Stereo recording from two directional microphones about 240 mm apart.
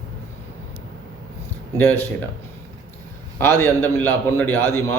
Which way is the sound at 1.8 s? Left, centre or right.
Centre.